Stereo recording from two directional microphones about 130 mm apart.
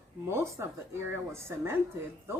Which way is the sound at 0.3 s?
20° right (ahead or behind).